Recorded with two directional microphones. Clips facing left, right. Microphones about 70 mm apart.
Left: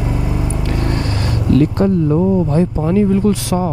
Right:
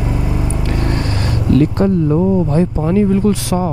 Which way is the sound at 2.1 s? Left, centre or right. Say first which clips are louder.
Even; centre.